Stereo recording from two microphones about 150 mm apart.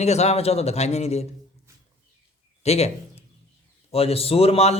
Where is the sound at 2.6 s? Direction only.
45° left (ahead or behind).